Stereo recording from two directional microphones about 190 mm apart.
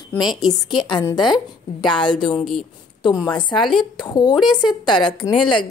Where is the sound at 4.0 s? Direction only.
20° left (ahead or behind).